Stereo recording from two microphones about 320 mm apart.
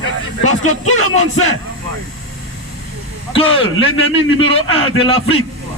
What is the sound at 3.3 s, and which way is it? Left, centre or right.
A man's voice, centre.